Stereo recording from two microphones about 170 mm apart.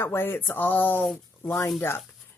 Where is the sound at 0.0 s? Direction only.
15° left (ahead or behind).